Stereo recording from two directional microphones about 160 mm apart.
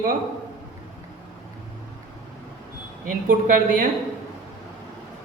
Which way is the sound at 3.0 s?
60° right (ahead or behind).